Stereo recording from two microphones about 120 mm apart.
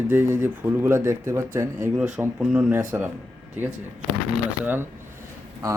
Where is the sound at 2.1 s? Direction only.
10° right (ahead or behind).